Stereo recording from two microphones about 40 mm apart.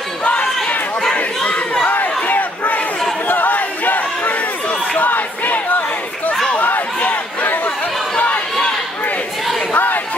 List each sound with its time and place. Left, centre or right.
1.1 s battle cry: left
3.3 s crowd: left
6.5 s a sound: left
9.7 s crowd: left